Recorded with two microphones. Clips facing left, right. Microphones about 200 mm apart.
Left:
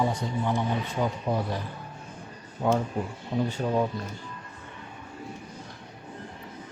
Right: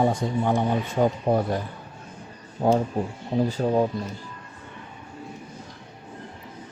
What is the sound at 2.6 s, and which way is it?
Speech, 35° right (ahead or behind).